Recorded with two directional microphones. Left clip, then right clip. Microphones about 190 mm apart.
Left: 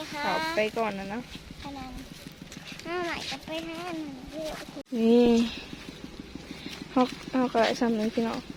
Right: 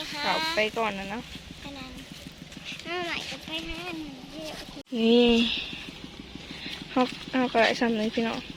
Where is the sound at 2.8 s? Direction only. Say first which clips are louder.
Even; 40° left (ahead or behind).